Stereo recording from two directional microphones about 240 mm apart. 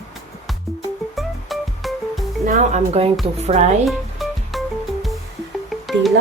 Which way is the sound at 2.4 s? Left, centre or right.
Right.